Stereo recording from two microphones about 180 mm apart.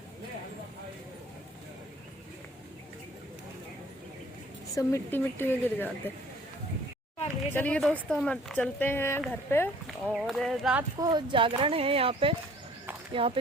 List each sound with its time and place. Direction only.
4.7 s speech: 15° left (ahead or behind)
7.5 s speech: 10° left (ahead or behind)
9.8 s speech: 5° right (ahead or behind)
10.9 s speech: 25° right (ahead or behind)